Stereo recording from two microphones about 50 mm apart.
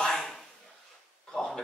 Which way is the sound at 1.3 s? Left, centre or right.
Centre.